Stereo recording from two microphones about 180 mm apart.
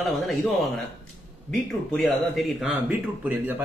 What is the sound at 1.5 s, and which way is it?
Speech, 5° left (ahead or behind).